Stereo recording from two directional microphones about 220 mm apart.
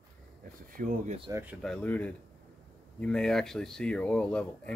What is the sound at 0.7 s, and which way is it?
Speech, 40° right (ahead or behind).